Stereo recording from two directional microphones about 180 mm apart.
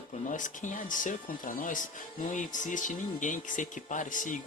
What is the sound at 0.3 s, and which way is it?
Speech, 45° left (ahead or behind).